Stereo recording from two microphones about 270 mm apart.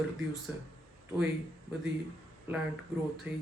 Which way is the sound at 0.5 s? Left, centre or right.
Centre.